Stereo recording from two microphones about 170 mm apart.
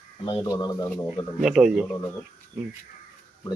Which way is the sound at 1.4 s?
5° right (ahead or behind).